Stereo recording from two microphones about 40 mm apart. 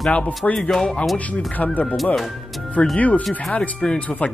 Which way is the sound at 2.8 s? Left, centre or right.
Left.